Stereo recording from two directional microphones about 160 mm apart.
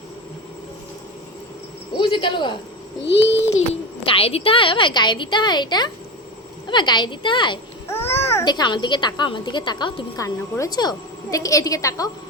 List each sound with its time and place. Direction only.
2.0 s a woman's voice: 30° left (ahead or behind)
3.0 s a child's voice: 90° left
4.0 s a woman's voice: 35° left (ahead or behind)
7.9 s babbling: 15° left (ahead or behind)
8.4 s a woman's voice: 25° left (ahead or behind)